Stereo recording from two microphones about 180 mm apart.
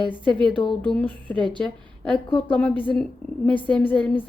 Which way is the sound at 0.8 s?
10° left (ahead or behind).